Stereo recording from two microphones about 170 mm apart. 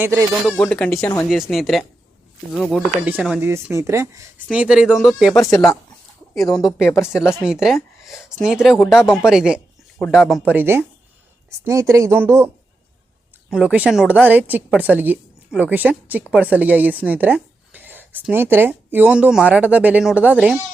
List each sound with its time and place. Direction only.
0.0 s a woman's voice: 15° right (ahead or behind)
0.4 s a woman's voice: 5° left (ahead or behind)
6.5 s speech: centre (ahead or behind)
10.5 s a woman's voice: 10° right (ahead or behind)
13.5 s a woman's voice: 5° right (ahead or behind)